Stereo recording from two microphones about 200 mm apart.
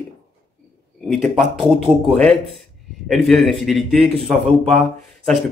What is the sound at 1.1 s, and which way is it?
Speech, centre (ahead or behind).